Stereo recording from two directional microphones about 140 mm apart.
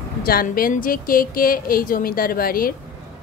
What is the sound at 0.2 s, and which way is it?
A woman's voice, 90° left.